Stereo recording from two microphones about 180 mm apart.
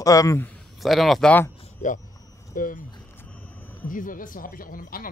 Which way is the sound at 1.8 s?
45° left (ahead or behind).